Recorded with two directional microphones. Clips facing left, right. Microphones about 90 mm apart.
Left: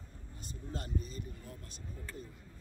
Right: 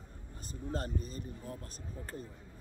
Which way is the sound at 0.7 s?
40° right (ahead or behind).